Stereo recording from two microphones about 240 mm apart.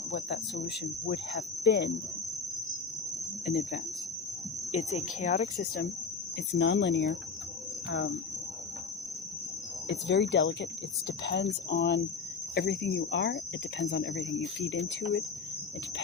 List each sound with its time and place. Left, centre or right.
0.1 s cricket: left
3.4 s speech: left
6.6 s cricket: left
9.9 s cricket: left